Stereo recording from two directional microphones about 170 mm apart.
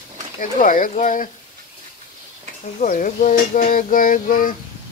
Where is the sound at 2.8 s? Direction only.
50° left (ahead or behind).